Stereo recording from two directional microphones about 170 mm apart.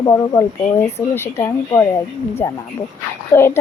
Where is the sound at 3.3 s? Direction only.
15° left (ahead or behind).